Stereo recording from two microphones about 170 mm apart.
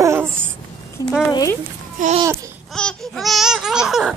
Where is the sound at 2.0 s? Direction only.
50° right (ahead or behind).